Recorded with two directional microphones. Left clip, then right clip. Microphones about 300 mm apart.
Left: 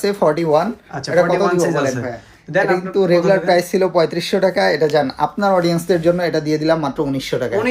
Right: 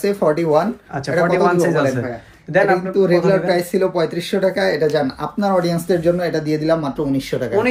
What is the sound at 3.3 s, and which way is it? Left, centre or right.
Speech, centre.